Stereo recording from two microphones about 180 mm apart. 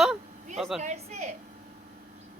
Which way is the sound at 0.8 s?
40° right (ahead or behind).